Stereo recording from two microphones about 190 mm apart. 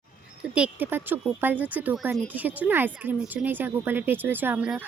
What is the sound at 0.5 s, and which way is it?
Speech, 5° right (ahead or behind).